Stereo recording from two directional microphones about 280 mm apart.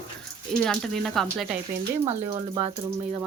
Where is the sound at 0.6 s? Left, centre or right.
Centre.